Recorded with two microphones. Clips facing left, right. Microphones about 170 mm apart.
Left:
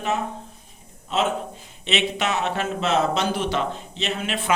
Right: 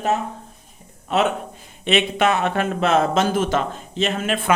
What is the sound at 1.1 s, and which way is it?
Speech, 60° right (ahead or behind).